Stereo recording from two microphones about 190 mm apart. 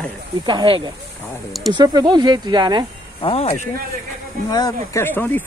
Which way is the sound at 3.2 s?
30° left (ahead or behind).